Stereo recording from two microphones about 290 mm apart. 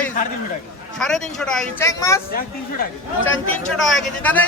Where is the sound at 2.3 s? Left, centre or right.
Left.